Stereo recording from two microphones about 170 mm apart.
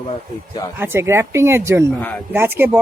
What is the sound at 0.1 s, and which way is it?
Speech, 25° left (ahead or behind).